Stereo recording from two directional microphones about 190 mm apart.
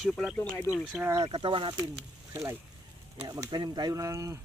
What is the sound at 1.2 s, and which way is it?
Speech, 25° right (ahead or behind).